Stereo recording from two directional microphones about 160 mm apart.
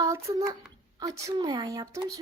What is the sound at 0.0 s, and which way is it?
A child's voice, 20° right (ahead or behind).